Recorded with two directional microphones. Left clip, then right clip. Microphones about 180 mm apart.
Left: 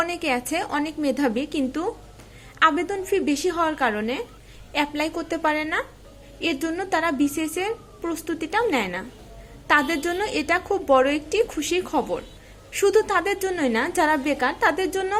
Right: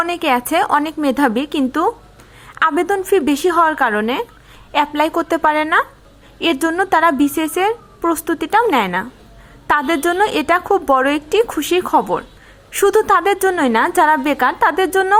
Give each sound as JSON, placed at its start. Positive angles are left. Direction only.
{"t": 0.0, "sound": "a woman's voice", "side_deg": -30}